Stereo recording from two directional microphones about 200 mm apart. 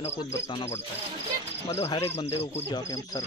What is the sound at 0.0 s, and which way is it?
Speech, 25° left (ahead or behind).